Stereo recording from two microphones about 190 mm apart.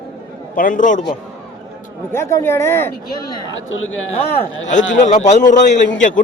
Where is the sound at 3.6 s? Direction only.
90° left.